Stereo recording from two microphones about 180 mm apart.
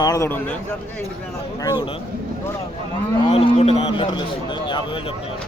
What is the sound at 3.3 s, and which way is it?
A man's voice, 35° left (ahead or behind).